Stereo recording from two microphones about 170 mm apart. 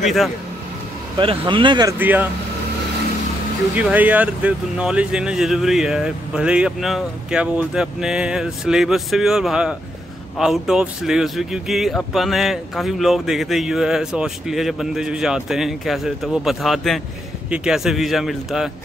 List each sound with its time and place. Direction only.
0.0 s speech: centre (ahead or behind)
1.1 s speech: 30° right (ahead or behind)
2.0 s speech: 10° right (ahead or behind)
3.7 s speech: 10° right (ahead or behind)